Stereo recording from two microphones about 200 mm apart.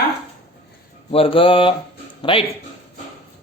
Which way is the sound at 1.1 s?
25° left (ahead or behind).